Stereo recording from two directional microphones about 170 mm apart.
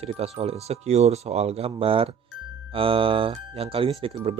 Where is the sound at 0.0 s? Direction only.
35° right (ahead or behind).